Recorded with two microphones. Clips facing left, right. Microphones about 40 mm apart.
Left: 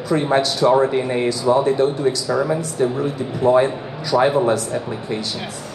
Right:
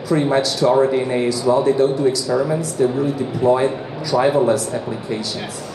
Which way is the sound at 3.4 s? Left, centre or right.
Left.